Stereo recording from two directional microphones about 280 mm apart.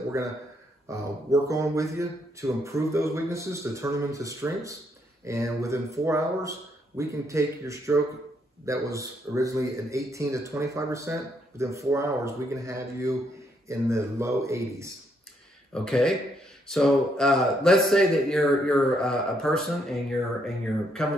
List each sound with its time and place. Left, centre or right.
0.2 s a man's voice: centre
15.7 s speech: centre